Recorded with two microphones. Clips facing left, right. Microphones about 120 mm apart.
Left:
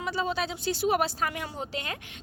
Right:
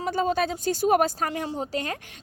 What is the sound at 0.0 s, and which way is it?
A woman's voice, 45° right (ahead or behind).